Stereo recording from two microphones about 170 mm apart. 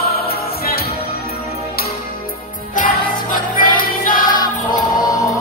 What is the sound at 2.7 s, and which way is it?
Music, 50° left (ahead or behind).